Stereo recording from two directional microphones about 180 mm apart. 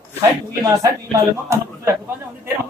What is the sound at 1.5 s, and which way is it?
Speech, 15° right (ahead or behind).